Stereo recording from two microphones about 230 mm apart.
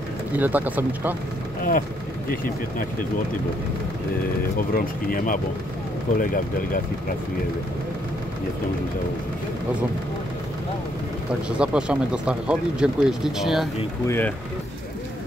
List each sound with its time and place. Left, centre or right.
0.4 s speech: centre
1.6 s speech: left
4.6 s speech: left
11.4 s speech: centre
14.0 s speech: centre